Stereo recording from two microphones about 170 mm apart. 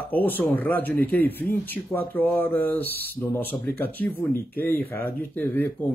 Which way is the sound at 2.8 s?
65° right (ahead or behind).